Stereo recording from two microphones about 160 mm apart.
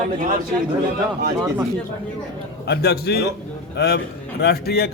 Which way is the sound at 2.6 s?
90° left.